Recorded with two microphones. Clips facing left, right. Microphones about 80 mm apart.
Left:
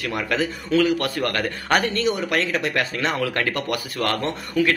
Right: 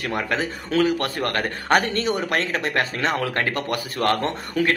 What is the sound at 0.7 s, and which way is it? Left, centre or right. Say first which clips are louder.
Speech: left 1 dB; right.